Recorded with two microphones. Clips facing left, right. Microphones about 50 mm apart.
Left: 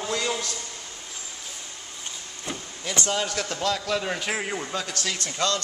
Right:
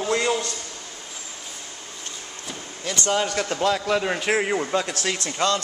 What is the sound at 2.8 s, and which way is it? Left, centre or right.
Speech, centre.